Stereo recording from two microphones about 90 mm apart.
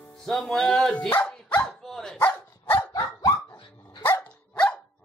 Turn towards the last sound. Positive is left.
turn(degrees=10)  # may be behind; listen again after turning